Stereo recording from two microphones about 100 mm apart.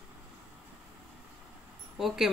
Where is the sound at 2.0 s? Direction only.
5° right (ahead or behind).